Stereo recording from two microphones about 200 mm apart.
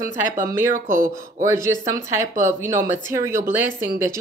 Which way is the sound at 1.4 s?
15° right (ahead or behind).